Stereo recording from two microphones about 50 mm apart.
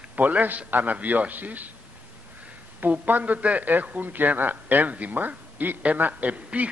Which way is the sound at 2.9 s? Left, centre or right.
Right.